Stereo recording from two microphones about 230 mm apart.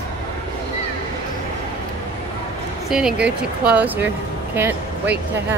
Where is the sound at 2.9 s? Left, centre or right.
Centre.